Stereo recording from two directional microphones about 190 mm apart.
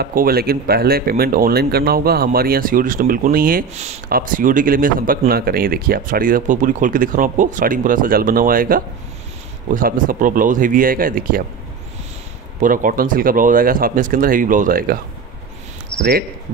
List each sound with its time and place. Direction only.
0.0 s speech: 50° right (ahead or behind)
3.7 s speech: 35° right (ahead or behind)
4.1 s speech: 45° right (ahead or behind)
12.5 s speech: 45° right (ahead or behind)
15.9 s cricket: 25° left (ahead or behind)